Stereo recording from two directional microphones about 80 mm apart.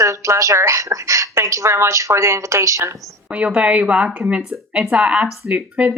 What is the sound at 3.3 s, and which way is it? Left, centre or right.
Speech, centre.